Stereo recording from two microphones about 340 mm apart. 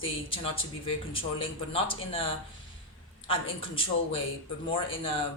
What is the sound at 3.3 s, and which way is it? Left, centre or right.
Speech, centre.